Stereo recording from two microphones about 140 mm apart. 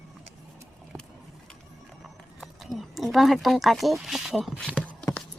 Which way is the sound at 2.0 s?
Centre (ahead or behind).